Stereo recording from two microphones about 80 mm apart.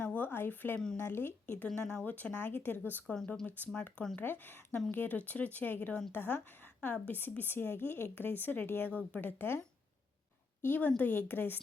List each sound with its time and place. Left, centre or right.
0.0 s a sound: centre
0.9 s speech: left
1.6 s speech: centre
4.2 s speech: left